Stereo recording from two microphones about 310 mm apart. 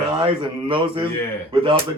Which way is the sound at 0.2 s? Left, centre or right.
Centre.